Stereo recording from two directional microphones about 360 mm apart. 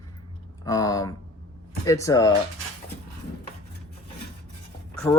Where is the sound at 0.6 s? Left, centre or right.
Centre.